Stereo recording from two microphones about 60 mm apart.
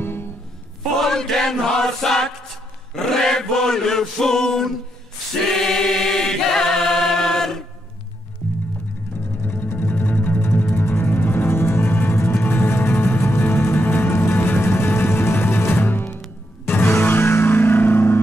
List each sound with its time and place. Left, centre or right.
0.0 s music: left
0.9 s chant: centre
9.5 s music: left